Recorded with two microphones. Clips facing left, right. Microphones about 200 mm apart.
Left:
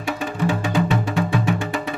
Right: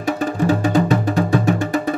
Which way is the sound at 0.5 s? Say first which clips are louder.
Right 5 dB; 40° right (ahead or behind).